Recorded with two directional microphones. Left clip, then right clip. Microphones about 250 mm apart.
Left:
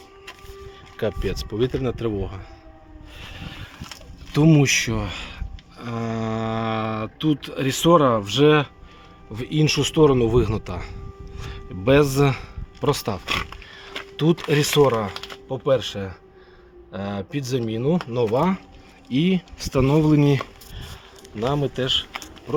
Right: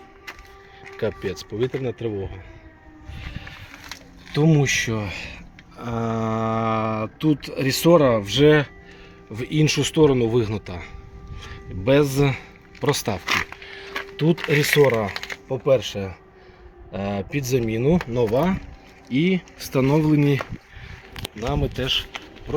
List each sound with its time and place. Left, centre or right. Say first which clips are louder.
0.9 s speech: left 1 dB; centre
3.2 s vehicle: left 1 dB; centre
4.3 s speech: left 2 dB; centre
14.2 s speech: even; centre
14.8 s speech: even; centre